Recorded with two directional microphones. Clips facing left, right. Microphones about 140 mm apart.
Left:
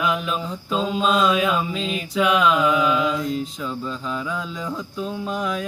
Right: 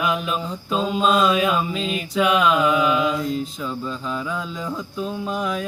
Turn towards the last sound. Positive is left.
turn(degrees=-5)  # may be behind; listen again after turning